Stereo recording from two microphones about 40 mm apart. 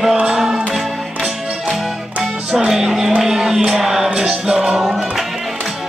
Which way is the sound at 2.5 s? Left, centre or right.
Centre.